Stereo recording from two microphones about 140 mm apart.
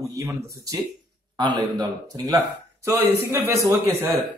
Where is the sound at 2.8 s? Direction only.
15° right (ahead or behind).